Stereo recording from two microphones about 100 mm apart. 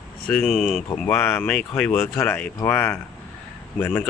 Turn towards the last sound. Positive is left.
turn(degrees=20)  # may be behind; listen again after turning